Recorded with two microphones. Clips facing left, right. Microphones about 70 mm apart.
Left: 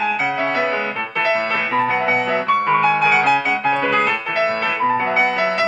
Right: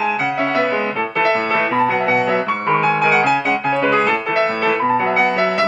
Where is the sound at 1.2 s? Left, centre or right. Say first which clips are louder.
Right 2 dB; centre.